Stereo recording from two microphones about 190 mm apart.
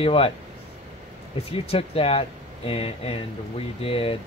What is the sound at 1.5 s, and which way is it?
Speech, 30° left (ahead or behind).